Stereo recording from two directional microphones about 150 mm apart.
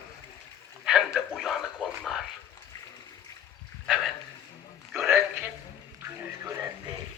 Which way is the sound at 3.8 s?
Centre (ahead or behind).